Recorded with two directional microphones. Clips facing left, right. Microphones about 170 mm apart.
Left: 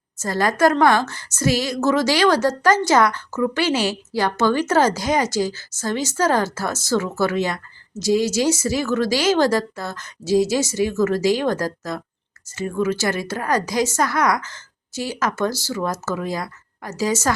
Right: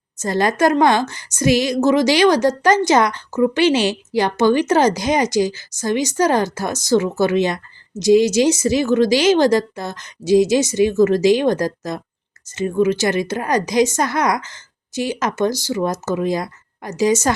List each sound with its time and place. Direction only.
0.2 s a woman's voice: 20° right (ahead or behind)